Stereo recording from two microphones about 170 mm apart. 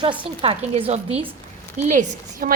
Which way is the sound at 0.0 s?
30° right (ahead or behind).